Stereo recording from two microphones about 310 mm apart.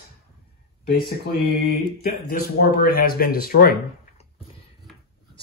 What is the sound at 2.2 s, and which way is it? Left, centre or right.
Speech, left.